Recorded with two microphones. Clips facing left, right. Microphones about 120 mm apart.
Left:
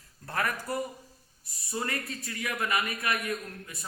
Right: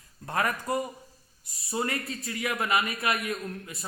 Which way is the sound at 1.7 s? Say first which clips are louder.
Right 3 dB; 25° right (ahead or behind).